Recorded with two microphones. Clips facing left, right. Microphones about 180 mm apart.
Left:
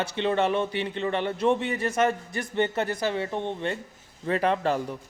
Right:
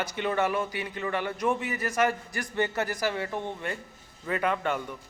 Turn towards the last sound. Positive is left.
turn(degrees=30)  # may be behind; listen again after turning